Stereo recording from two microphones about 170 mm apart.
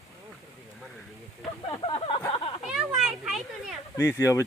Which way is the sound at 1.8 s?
35° left (ahead or behind).